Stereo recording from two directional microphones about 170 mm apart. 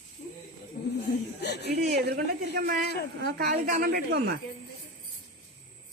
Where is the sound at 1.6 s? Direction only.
70° right (ahead or behind).